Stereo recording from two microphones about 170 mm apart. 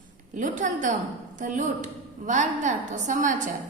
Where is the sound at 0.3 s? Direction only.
50° right (ahead or behind).